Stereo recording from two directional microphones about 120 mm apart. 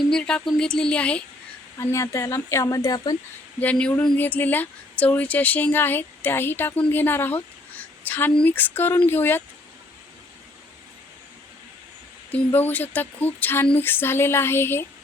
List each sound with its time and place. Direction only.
0.1 s speech: 10° left (ahead or behind)
1.8 s speech: 25° left (ahead or behind)
3.6 s speech: 10° left (ahead or behind)
12.3 s speech: 15° left (ahead or behind)